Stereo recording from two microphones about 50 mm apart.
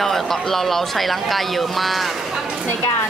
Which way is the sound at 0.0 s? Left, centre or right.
Centre.